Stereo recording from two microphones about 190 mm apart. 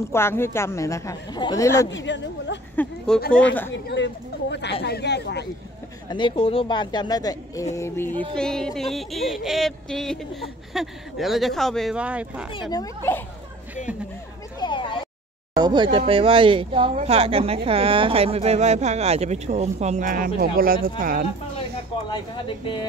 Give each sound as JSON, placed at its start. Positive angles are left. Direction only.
{"t": 0.1, "sound": "a woman's voice", "side_deg": 15}
{"t": 1.9, "sound": "speech", "side_deg": 70}
{"t": 2.7, "sound": "speech", "side_deg": 10}
{"t": 3.7, "sound": "speech", "side_deg": 70}
{"t": 6.0, "sound": "a woman's voice", "side_deg": 25}
{"t": 8.4, "sound": "a sound", "side_deg": 5}
{"t": 12.7, "sound": "a woman's voice", "side_deg": 15}
{"t": 14.6, "sound": "a sound", "side_deg": 25}
{"t": 15.5, "sound": "a woman's voice", "side_deg": -20}
{"t": 22.1, "sound": "speech", "side_deg": 25}